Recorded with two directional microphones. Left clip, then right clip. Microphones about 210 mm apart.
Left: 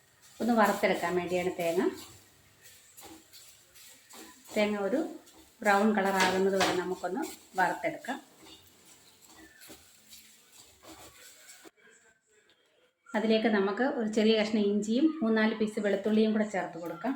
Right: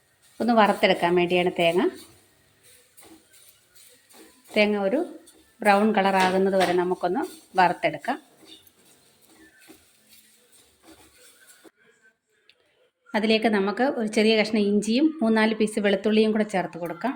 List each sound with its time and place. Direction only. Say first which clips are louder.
0.3 s a woman's voice: right 7 dB; 45° right (ahead or behind)
4.5 s a woman's voice: right 7 dB; 50° right (ahead or behind)
13.1 s a woman's voice: right 5 dB; 50° right (ahead or behind)